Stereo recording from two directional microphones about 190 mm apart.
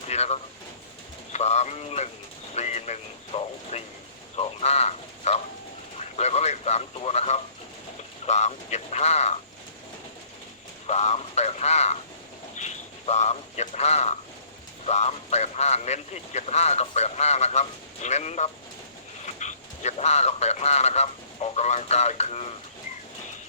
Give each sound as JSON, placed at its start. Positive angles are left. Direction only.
{"t": 0.1, "sound": "a sound", "side_deg": 35}
{"t": 1.3, "sound": "speech", "side_deg": 35}
{"t": 10.8, "sound": "speech", "side_deg": 35}